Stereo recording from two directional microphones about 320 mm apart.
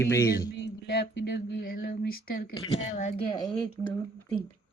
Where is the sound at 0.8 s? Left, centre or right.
Left.